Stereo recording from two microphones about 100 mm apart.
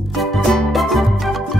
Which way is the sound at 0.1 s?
Centre (ahead or behind).